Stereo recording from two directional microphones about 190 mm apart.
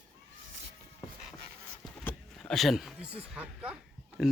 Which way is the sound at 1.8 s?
5° left (ahead or behind).